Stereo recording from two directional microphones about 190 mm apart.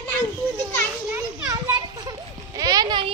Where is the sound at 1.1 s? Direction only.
20° right (ahead or behind).